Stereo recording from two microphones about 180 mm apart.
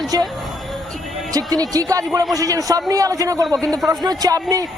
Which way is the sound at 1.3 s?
20° right (ahead or behind).